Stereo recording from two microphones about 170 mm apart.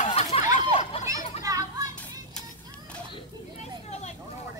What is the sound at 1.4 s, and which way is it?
Children playing, 20° right (ahead or behind).